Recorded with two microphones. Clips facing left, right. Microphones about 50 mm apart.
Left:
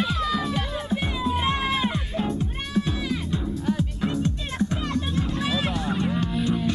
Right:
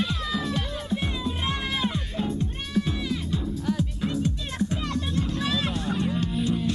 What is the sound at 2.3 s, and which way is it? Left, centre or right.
Music, centre.